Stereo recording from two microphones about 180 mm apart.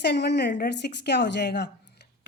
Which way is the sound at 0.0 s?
65° left (ahead or behind).